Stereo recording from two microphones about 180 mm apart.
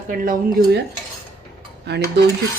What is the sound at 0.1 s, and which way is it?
Speech, 50° right (ahead or behind).